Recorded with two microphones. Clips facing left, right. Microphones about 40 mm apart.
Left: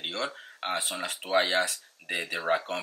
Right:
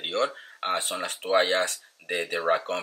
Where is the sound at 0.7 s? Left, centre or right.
Centre.